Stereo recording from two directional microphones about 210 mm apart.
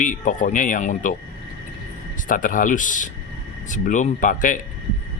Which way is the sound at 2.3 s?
40° left (ahead or behind).